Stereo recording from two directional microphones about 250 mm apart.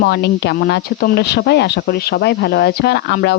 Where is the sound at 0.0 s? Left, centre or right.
Left.